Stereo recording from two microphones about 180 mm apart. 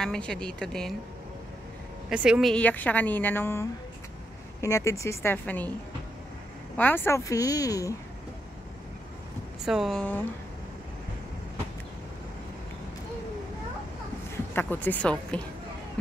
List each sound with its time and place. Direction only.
0.0 s a woman's voice: 5° left (ahead or behind)
2.0 s speech: 5° right (ahead or behind)
6.8 s speech: 10° left (ahead or behind)
9.7 s a woman's voice: centre (ahead or behind)
14.5 s speech: 10° left (ahead or behind)